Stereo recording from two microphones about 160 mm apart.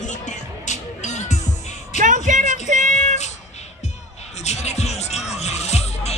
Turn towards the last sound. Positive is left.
turn(degrees=40)  # may be behind; listen again after turning